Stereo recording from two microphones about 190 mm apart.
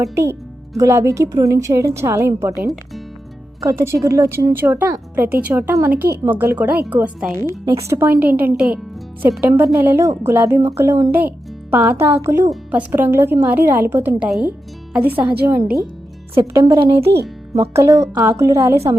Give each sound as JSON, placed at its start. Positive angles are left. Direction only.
{"t": 0.0, "sound": "speech", "side_deg": -15}